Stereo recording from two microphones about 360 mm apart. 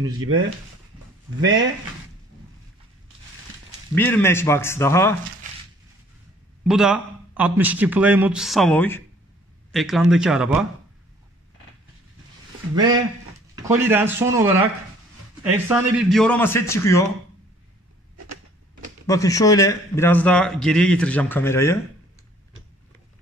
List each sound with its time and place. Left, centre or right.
0.2 s speech: right
3.9 s speech: centre
6.7 s a man's voice: centre
12.7 s speech: centre
15.5 s a man's voice: centre
19.0 s a man's voice: centre